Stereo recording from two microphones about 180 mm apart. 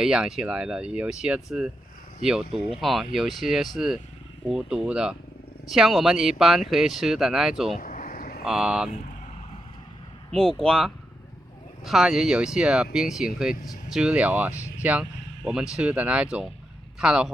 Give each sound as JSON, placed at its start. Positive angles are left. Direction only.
{"t": 0.0, "sound": "speech", "side_deg": -5}
{"t": 2.8, "sound": "speech", "side_deg": 0}
{"t": 7.8, "sound": "a sound", "side_deg": 50}
{"t": 8.5, "sound": "speech", "side_deg": -5}
{"t": 10.3, "sound": "speech", "side_deg": 5}